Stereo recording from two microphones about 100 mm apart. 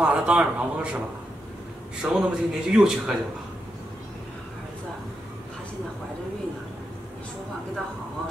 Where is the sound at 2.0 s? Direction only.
5° right (ahead or behind).